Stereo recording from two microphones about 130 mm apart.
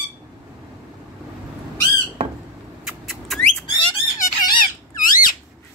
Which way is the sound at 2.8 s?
Centre (ahead or behind).